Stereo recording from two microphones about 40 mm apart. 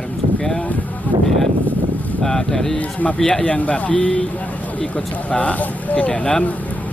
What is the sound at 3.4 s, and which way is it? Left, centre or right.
Speech, left.